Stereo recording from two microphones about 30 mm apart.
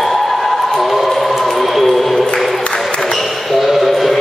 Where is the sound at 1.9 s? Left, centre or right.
Centre.